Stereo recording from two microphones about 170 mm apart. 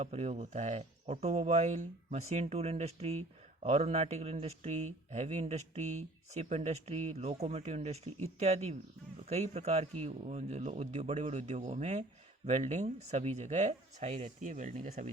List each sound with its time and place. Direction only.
0.0 s speech: 40° right (ahead or behind)